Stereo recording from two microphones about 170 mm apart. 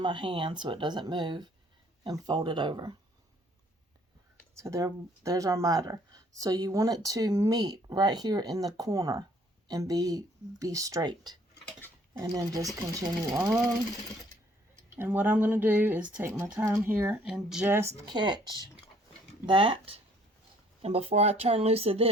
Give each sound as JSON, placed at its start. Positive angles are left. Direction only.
{"t": 0.0, "sound": "speech", "side_deg": -30}
{"t": 4.5, "sound": "speech", "side_deg": -15}
{"t": 14.9, "sound": "speech", "side_deg": -10}
{"t": 18.0, "sound": "speech", "side_deg": -25}